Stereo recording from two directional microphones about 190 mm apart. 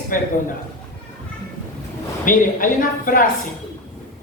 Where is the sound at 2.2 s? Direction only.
45° left (ahead or behind).